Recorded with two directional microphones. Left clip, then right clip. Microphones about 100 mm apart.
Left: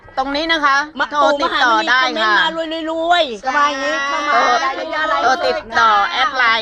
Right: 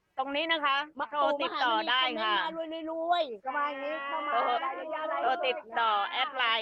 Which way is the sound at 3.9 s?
35° right (ahead or behind).